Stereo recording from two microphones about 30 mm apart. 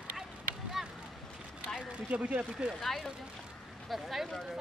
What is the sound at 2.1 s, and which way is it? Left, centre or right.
Speech, right.